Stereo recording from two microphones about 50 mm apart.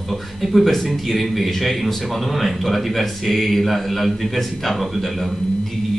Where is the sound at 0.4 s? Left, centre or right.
Centre.